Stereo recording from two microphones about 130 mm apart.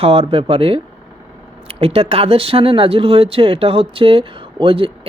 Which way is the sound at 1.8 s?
50° right (ahead or behind).